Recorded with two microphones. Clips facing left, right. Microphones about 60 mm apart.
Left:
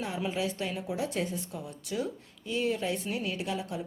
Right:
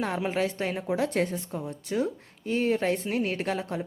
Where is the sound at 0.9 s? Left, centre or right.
Right.